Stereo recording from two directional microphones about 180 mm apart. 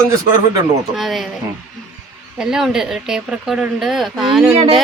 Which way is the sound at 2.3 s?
5° right (ahead or behind).